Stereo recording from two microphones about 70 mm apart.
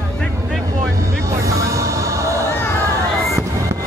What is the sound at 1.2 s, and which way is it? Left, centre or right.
Music, right.